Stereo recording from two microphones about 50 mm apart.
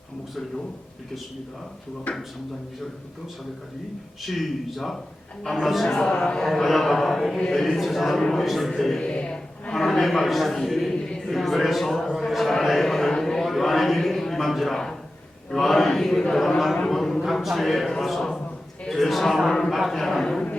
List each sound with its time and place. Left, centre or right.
2.1 s speech: left
4.2 s a man's voice: centre
5.9 s a man's voice: centre
6.5 s a man's voice: centre
9.0 s a sound: left
9.7 s a man's voice: centre
10.9 s a sound: centre
11.3 s a man's voice: centre
13.4 s a sound: centre
15.6 s a man's voice: centre